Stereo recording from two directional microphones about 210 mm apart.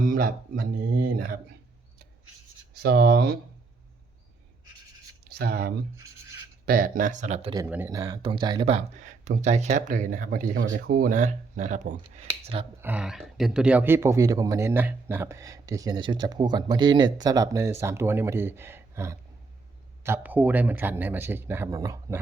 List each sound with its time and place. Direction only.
0.0 s speech: 40° right (ahead or behind)
2.7 s speech: 50° right (ahead or behind)
5.3 s speech: 50° right (ahead or behind); by 7.5 s 30° right (ahead or behind)
7.5 s speech: 10° right (ahead or behind)
12.8 s a man's voice: 5° right (ahead or behind)